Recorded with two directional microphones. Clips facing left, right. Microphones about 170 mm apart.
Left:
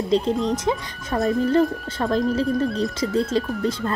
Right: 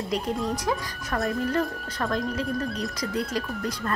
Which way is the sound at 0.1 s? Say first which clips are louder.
Left 7 dB; 25° left (ahead or behind).